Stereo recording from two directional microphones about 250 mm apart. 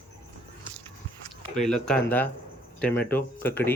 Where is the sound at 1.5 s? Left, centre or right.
Centre.